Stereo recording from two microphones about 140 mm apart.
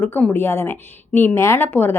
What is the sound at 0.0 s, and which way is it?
A woman's voice, 10° left (ahead or behind).